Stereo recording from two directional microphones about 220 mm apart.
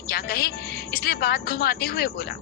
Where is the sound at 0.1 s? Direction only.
45° left (ahead or behind).